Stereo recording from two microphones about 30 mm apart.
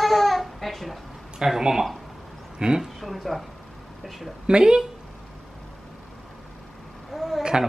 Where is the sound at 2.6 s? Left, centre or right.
Right.